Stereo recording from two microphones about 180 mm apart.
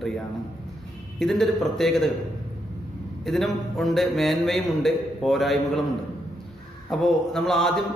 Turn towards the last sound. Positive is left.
turn(degrees=0)  # may be behind; listen again after turning